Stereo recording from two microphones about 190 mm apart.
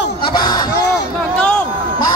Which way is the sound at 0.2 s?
25° left (ahead or behind).